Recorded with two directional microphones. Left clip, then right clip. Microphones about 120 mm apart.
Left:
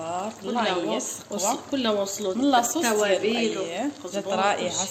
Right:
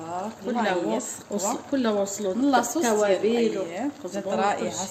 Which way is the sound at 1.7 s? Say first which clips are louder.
Even; 45° right (ahead or behind).